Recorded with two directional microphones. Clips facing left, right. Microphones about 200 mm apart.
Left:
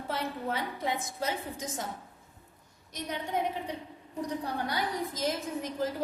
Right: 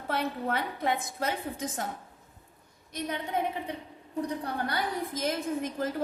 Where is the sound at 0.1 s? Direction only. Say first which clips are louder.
Right 4 dB; 60° right (ahead or behind).